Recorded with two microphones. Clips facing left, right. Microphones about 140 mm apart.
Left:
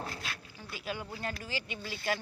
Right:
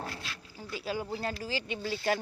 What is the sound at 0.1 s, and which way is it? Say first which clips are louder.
Dog: left 1 dB; 50° left (ahead or behind).